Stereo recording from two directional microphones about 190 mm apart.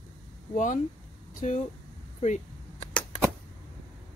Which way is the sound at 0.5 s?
40° left (ahead or behind).